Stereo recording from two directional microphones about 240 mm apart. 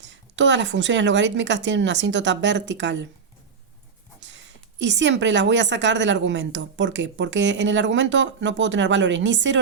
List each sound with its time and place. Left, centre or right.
0.0 s a woman's voice: right
4.2 s a woman's voice: right